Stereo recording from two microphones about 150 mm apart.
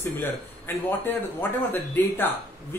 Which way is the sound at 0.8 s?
15° left (ahead or behind).